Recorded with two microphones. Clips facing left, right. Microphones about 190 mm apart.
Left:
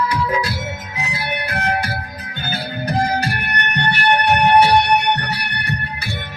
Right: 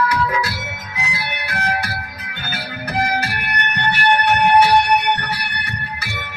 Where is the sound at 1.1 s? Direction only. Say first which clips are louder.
Left 6 dB; 25° left (ahead or behind).